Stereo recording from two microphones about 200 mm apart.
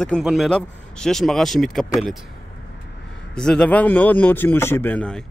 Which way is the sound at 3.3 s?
5° left (ahead or behind).